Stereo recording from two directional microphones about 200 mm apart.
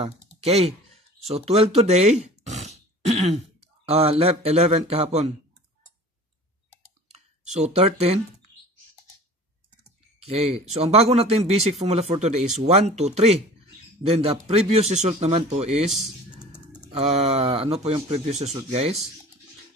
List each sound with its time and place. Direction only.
0.0 s a sound: 30° right (ahead or behind)
3.8 s speech: 30° right (ahead or behind)
7.4 s speech: 35° right (ahead or behind)
10.2 s speech: 30° right (ahead or behind)
16.9 s speech: 30° right (ahead or behind)